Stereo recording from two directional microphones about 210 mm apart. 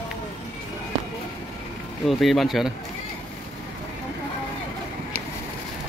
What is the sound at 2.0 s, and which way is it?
Speech, centre (ahead or behind).